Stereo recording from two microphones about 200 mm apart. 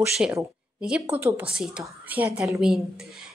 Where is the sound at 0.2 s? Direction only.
10° right (ahead or behind).